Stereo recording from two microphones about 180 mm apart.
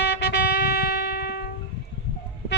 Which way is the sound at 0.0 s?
70° left (ahead or behind).